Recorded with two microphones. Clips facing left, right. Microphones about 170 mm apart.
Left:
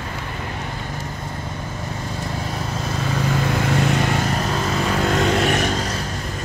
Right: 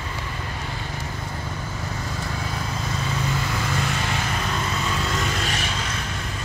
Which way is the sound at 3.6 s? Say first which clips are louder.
Left 7 dB; 60° left (ahead or behind).